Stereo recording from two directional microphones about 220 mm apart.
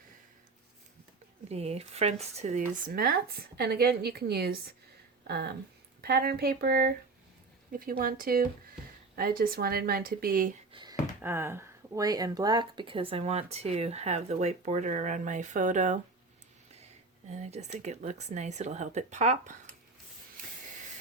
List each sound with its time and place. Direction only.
1.5 s speech: 30° right (ahead or behind)
10.7 s a sound: 20° right (ahead or behind)
11.2 s speech: 10° right (ahead or behind); by 16.0 s 35° right (ahead or behind)
17.2 s speech: 30° right (ahead or behind)